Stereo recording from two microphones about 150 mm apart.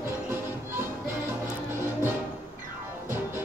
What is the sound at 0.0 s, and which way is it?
Music, 15° right (ahead or behind).